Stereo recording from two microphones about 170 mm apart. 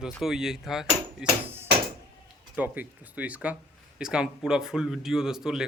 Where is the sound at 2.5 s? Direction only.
10° right (ahead or behind).